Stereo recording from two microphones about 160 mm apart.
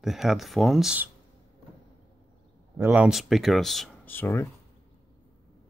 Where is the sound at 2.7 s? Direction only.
10° right (ahead or behind).